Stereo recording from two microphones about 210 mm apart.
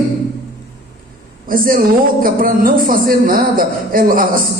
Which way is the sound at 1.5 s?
40° right (ahead or behind).